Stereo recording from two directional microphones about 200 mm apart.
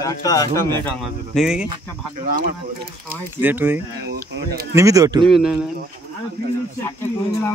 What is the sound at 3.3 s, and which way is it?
Speech, 10° right (ahead or behind).